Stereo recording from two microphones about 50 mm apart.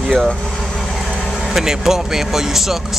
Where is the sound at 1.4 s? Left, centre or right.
Centre.